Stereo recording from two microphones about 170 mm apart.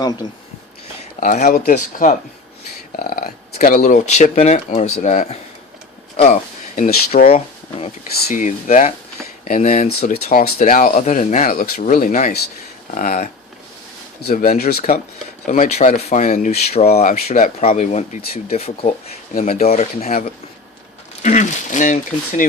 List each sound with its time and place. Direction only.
1.2 s speech: 50° left (ahead or behind)
1.7 s speech: 45° left (ahead or behind)
2.9 s speech: 60° left (ahead or behind)
6.1 s a sound: 45° left (ahead or behind)
7.3 s speech: 35° left (ahead or behind)
8.3 s speech: 50° left (ahead or behind)
10.3 s speech: 55° left (ahead or behind)
15.4 s speech: 50° left (ahead or behind)